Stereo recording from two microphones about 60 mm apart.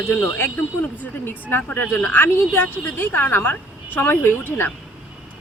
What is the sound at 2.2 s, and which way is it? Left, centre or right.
Speech, left.